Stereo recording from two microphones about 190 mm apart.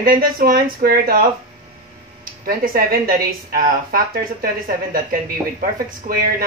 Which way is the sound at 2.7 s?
50° right (ahead or behind).